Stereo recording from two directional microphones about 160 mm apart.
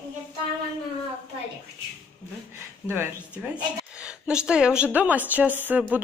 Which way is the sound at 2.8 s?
5° right (ahead or behind).